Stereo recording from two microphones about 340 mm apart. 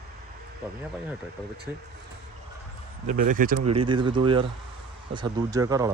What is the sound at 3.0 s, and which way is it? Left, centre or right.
Speech, right.